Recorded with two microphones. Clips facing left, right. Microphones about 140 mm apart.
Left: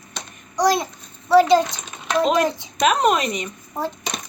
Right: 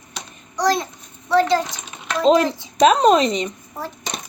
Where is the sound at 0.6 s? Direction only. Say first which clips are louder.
Left 1 dB; 10° left (ahead or behind).